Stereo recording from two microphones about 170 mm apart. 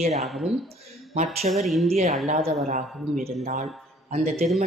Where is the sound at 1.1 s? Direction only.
40° right (ahead or behind).